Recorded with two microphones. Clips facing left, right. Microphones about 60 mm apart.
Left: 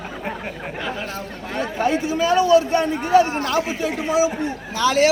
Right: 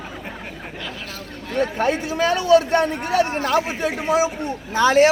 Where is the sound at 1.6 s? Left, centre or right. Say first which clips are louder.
Right 1 dB; right.